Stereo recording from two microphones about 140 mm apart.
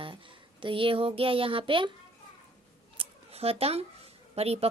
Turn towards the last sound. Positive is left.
turn(degrees=-45)  # may be behind; listen again after turning